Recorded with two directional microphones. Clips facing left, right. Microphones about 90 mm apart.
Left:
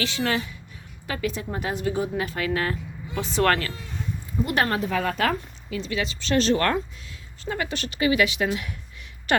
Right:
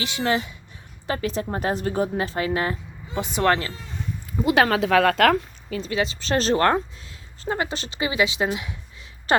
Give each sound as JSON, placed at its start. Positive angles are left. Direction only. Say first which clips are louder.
{"t": 0.0, "sound": "a woman's voice", "louder": "right 2 dB", "side_deg": -25}
{"t": 4.5, "sound": "speech", "louder": "right 6 dB", "side_deg": -90}
{"t": 5.7, "sound": "a woman's voice", "louder": "right 3 dB", "side_deg": -35}